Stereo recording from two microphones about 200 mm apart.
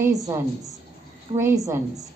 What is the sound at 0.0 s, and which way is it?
A woman's voice, 15° right (ahead or behind).